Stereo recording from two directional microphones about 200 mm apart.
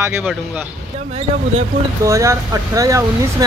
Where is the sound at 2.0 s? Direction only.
15° right (ahead or behind).